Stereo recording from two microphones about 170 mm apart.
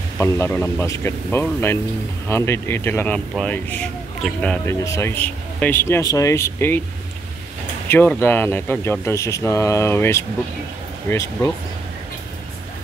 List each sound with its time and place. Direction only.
0.2 s speech: 15° left (ahead or behind)
4.8 s speech: 15° left (ahead or behind)
7.9 s speech: 10° left (ahead or behind)